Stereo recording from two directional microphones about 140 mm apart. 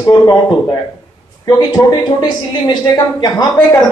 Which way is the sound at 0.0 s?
30° left (ahead or behind).